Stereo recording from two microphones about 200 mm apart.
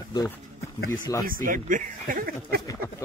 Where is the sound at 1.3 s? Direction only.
45° right (ahead or behind).